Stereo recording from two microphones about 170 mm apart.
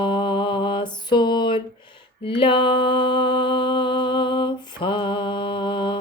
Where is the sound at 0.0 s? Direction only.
30° left (ahead or behind).